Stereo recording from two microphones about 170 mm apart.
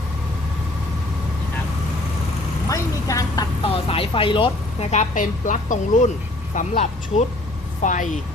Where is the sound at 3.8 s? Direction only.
35° left (ahead or behind).